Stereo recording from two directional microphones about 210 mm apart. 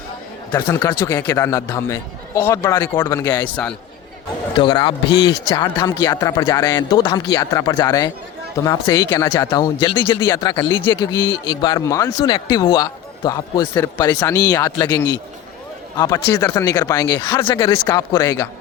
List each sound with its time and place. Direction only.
0.5 s a man's voice: 15° left (ahead or behind)
3.4 s a man's voice: 5° left (ahead or behind)
4.5 s a man's voice: 20° left (ahead or behind)
16.0 s a man's voice: 20° left (ahead or behind)